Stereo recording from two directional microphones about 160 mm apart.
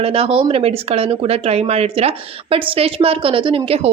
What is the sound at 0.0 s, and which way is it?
Speech, 35° right (ahead or behind).